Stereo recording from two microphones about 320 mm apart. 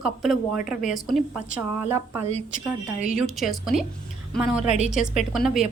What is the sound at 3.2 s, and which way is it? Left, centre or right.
Speech, centre.